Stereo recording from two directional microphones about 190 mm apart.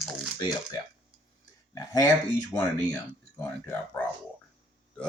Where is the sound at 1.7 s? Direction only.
20° left (ahead or behind).